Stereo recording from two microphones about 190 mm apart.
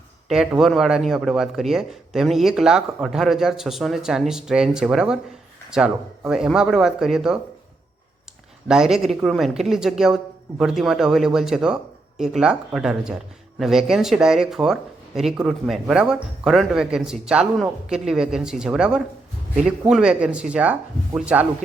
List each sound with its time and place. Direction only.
0.3 s speech: centre (ahead or behind)
8.6 s speech: 5° right (ahead or behind)